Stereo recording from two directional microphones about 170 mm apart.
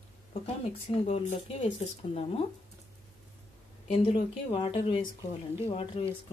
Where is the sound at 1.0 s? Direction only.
40° left (ahead or behind).